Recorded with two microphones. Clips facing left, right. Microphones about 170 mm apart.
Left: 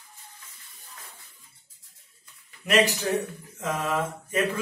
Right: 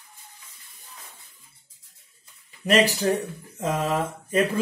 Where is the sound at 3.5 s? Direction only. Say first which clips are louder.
Right 3 dB; 30° right (ahead or behind).